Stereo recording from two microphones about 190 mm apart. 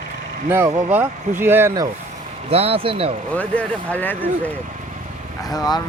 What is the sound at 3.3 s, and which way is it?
Speech, 5° left (ahead or behind).